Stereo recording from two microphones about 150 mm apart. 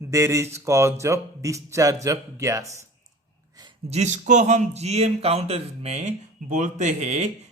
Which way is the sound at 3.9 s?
50° right (ahead or behind).